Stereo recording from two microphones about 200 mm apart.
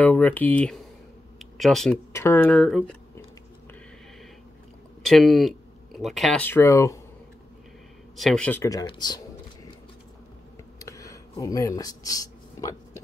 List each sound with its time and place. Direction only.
0.0 s speech: 10° left (ahead or behind)
5.0 s speech: centre (ahead or behind)
8.2 s speech: 5° left (ahead or behind); by 9.2 s 20° left (ahead or behind)
10.8 s a sound: 15° left (ahead or behind)